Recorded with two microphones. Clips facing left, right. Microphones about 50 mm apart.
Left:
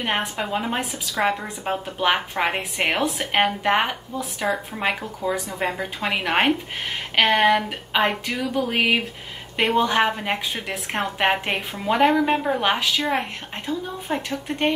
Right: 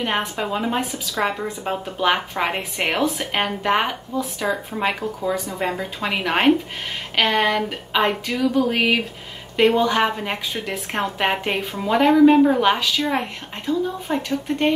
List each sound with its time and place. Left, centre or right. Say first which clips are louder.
0.4 s a woman's voice: right 2 dB; centre
10.0 s speech: right 1 dB; centre